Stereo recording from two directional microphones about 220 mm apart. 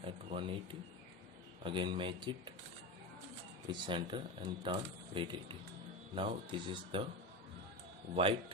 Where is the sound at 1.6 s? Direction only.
20° right (ahead or behind).